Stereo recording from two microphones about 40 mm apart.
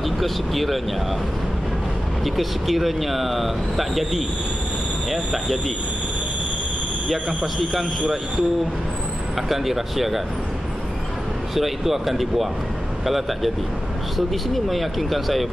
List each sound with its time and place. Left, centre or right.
0.0 s speech: centre
2.2 s speech: centre
9.5 s speech: centre
11.5 s speech: centre